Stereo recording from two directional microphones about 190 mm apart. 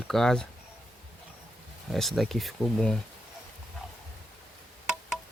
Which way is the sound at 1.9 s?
Centre (ahead or behind).